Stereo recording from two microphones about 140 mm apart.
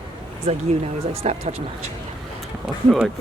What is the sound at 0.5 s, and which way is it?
Speech, 50° right (ahead or behind).